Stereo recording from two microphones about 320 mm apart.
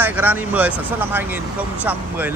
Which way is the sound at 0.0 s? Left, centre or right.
Centre.